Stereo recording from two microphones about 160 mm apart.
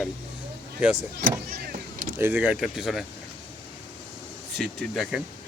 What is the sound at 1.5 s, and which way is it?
Vehicle, 70° right (ahead or behind).